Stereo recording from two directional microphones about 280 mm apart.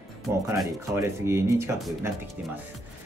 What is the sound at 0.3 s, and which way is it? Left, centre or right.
Speech, centre.